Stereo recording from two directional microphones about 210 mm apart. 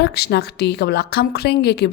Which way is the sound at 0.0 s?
50° left (ahead or behind).